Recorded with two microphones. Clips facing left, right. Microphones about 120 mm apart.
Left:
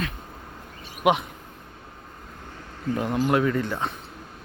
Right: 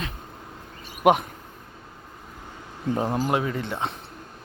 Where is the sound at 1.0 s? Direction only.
45° right (ahead or behind).